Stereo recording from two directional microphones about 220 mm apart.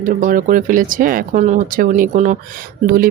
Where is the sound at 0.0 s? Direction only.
35° right (ahead or behind).